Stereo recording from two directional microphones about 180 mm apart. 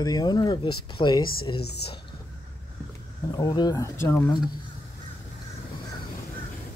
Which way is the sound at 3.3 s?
20° left (ahead or behind).